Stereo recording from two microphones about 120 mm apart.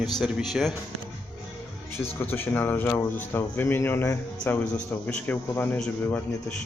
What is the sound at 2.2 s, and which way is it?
A man's voice, 15° left (ahead or behind).